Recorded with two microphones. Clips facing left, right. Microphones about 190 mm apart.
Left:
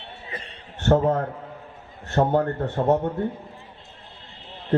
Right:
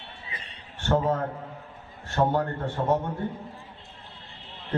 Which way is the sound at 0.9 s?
50° left (ahead or behind).